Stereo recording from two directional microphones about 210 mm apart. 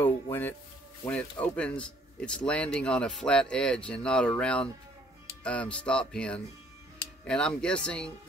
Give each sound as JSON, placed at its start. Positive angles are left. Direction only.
{"t": 0.0, "sound": "speech", "side_deg": 10}